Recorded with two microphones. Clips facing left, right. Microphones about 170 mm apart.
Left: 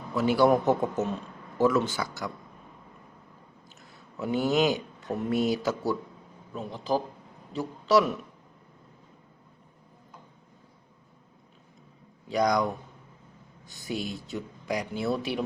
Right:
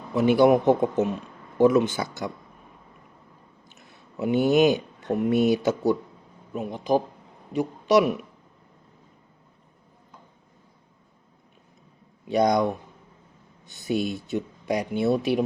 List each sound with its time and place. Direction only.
0.1 s speech: 20° right (ahead or behind)
3.7 s a sound: 20° right (ahead or behind)
5.1 s speech: 20° right (ahead or behind)
12.3 s speech: 25° right (ahead or behind)